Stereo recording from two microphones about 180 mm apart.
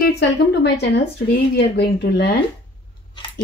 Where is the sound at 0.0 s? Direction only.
65° left (ahead or behind).